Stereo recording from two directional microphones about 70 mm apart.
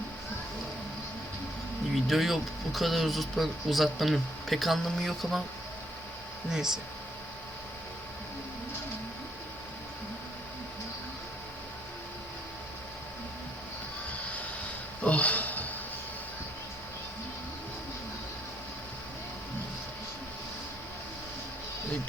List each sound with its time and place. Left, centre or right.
2.0 s speech: centre
6.5 s speech: centre
15.0 s a sound: centre